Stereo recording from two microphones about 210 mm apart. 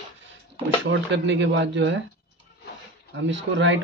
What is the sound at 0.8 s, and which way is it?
A man's voice, 60° right (ahead or behind).